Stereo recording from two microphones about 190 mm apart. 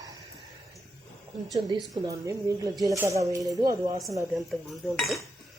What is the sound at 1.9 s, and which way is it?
A woman's voice, 15° right (ahead or behind).